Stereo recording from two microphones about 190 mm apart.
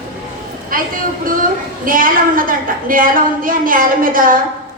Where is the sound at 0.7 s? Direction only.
45° right (ahead or behind).